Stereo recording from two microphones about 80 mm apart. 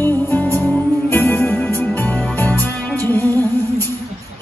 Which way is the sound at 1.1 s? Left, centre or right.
Left.